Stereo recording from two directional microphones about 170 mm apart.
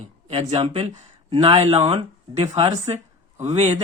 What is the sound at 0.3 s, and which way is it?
Speech, 35° right (ahead or behind).